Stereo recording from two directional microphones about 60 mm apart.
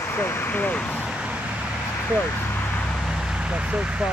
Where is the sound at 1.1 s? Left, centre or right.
Centre.